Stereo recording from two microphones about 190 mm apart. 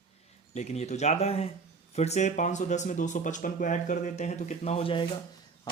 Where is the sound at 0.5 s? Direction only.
35° left (ahead or behind).